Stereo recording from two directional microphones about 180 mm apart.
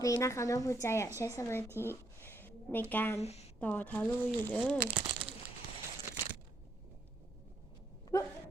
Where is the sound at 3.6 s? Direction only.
10° left (ahead or behind).